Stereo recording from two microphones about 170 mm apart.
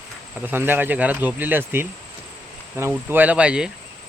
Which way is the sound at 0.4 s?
10° right (ahead or behind).